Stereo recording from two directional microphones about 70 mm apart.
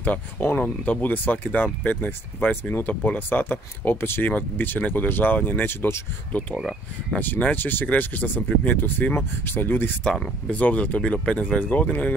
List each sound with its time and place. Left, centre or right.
0.0 s speech: left
6.5 s speech: centre
7.2 s speech: left
10.1 s speech: centre